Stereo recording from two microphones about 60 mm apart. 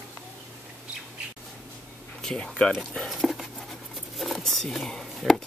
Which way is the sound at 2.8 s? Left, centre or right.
Centre.